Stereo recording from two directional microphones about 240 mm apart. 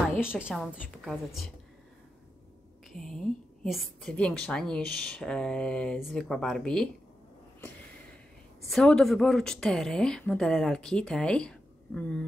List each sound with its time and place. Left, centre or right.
0.2 s a woman's voice: centre
2.9 s a woman's voice: centre
8.6 s a woman's voice: centre